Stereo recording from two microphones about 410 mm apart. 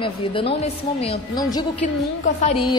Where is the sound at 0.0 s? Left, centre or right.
Centre.